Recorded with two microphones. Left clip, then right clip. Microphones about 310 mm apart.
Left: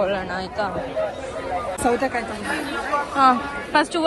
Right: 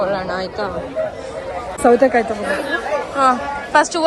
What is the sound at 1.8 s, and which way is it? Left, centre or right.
Speech, right.